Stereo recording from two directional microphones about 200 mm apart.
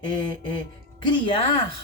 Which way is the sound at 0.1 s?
25° left (ahead or behind).